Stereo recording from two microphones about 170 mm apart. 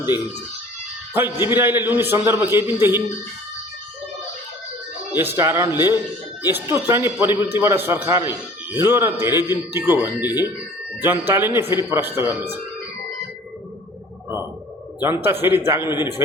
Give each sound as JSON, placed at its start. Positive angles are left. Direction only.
{"t": 1.1, "sound": "a man's voice", "side_deg": -15}
{"t": 5.1, "sound": "a man's voice", "side_deg": -15}
{"t": 15.0, "sound": "a man's voice", "side_deg": -15}